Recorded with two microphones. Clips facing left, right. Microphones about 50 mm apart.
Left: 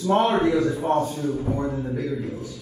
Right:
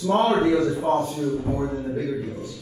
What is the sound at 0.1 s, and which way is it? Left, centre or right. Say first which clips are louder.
Speech: even; centre.